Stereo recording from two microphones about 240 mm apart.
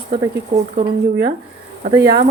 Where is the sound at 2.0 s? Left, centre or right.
Right.